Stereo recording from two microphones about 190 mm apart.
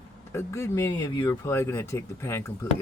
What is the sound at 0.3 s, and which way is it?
Speech, 15° left (ahead or behind).